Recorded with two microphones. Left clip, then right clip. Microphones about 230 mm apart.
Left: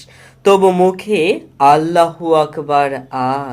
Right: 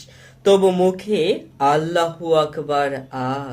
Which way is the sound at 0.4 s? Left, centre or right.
Centre.